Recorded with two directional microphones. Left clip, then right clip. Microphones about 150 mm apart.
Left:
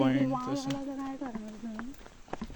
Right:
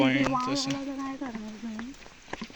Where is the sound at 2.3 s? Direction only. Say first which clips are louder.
Right 2 dB; 5° right (ahead or behind).